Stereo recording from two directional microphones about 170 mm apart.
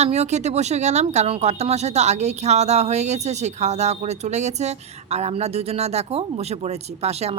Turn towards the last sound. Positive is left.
turn(degrees=-40)  # may be behind; listen again after turning